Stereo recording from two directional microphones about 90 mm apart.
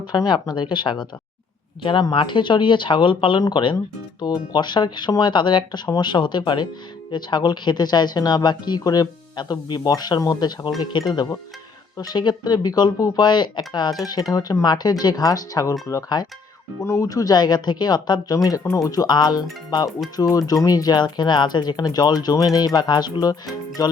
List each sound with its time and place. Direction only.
0.3 s speech: 55° left (ahead or behind)
16.8 s speech: 35° left (ahead or behind)
18.6 s speech: 35° left (ahead or behind)